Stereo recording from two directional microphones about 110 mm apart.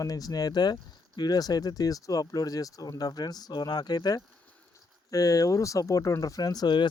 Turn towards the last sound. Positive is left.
turn(degrees=40)  # may be behind; listen again after turning